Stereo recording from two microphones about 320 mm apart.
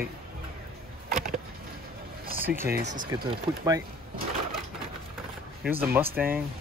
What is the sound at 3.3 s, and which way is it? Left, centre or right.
Speech, centre.